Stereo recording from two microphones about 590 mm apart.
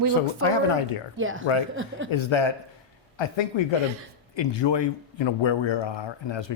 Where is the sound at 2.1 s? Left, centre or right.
Left.